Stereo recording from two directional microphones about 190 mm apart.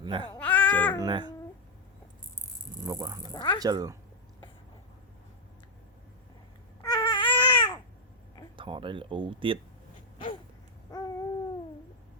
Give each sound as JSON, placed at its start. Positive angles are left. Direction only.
{"t": 0.0, "sound": "speech", "side_deg": -25}
{"t": 0.3, "sound": "a sound", "side_deg": 5}
{"t": 1.0, "sound": "speech", "side_deg": -25}
{"t": 2.8, "sound": "speech", "side_deg": -15}
{"t": 3.3, "sound": "speech", "side_deg": 25}
{"t": 3.6, "sound": "speech", "side_deg": -20}
{"t": 6.8, "sound": "baby cry", "side_deg": 20}
{"t": 8.5, "sound": "speech", "side_deg": -25}
{"t": 10.9, "sound": "a sound", "side_deg": 20}